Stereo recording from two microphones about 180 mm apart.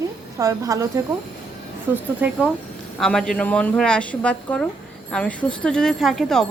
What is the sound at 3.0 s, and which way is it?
A woman's voice, 5° left (ahead or behind).